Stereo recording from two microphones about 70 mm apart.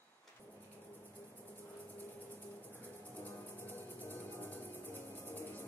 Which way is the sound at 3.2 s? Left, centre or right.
Left.